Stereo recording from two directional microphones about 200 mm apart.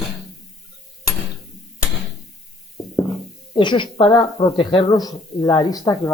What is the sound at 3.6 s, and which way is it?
Speech, 25° left (ahead or behind).